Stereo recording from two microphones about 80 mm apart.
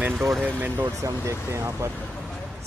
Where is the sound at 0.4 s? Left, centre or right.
Right.